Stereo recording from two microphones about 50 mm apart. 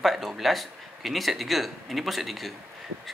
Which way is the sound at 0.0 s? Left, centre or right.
Centre.